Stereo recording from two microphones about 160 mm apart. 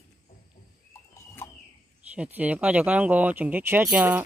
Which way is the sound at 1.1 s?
20° left (ahead or behind).